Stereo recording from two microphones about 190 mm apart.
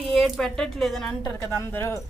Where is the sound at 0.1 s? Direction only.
Centre (ahead or behind).